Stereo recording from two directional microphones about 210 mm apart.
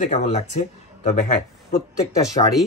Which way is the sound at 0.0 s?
30° left (ahead or behind).